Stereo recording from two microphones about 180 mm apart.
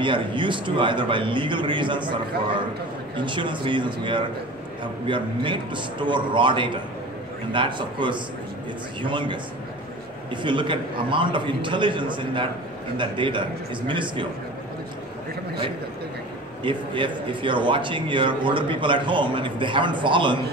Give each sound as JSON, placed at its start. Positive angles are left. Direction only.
{"t": 0.0, "sound": "a man's voice", "side_deg": -25}
{"t": 3.2, "sound": "a man's voice", "side_deg": -25}
{"t": 16.6, "sound": "a man's voice", "side_deg": -25}